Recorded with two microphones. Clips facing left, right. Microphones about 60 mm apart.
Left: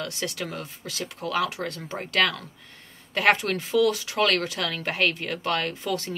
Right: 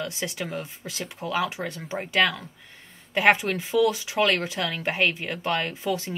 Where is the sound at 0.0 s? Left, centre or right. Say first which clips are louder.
Even; right.